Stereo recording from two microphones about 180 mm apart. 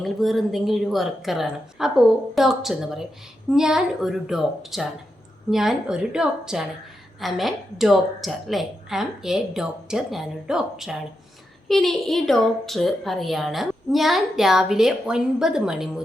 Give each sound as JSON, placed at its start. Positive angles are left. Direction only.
{"t": 0.0, "sound": "a woman's voice", "side_deg": 0}